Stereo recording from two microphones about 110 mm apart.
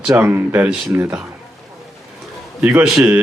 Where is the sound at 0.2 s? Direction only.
20° right (ahead or behind).